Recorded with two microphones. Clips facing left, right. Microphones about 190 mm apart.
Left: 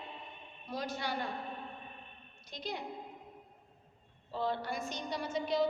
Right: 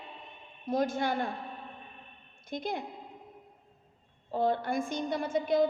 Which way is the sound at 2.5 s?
50° right (ahead or behind).